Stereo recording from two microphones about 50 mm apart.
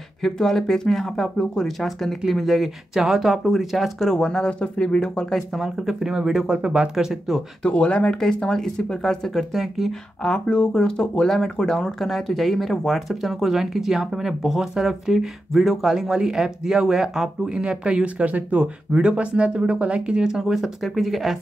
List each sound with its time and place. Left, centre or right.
0.2 s speech: centre
5.6 s speech: centre
7.6 s speech: left
8.2 s speech: centre
10.2 s speech: centre